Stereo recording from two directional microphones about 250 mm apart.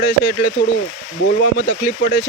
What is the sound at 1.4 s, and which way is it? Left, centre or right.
Speech, left.